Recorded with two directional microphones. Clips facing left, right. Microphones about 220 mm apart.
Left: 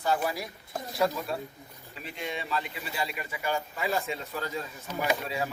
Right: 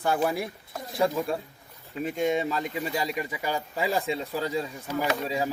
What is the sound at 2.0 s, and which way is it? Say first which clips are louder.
A man's voice: right 11 dB; 45° right (ahead or behind).